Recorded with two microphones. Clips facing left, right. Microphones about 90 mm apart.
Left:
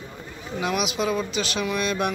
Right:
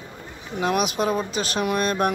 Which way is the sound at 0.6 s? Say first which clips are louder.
Right 3 dB; 45° right (ahead or behind).